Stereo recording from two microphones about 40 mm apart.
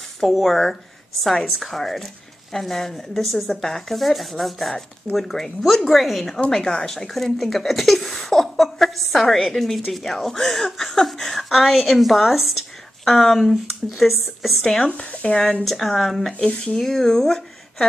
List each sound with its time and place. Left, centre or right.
0.2 s speech: centre
6.5 s speech: centre
15.2 s speech: left
15.6 s speech: centre
16.3 s speech: left
16.8 s speech: centre